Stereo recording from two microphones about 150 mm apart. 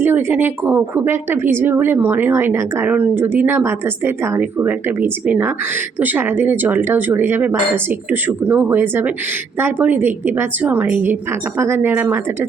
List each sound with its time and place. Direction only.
0.0 s speech: 15° right (ahead or behind)